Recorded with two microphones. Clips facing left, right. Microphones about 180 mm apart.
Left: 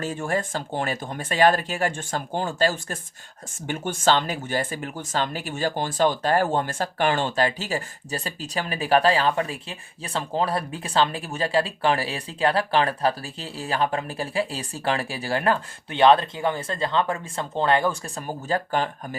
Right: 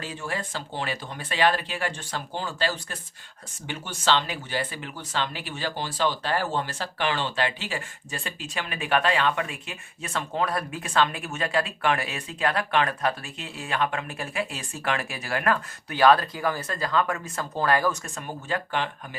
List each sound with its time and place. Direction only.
0.0 s speech: 45° left (ahead or behind)